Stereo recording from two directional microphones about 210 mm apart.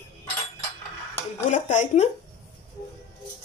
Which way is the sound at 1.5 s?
35° left (ahead or behind).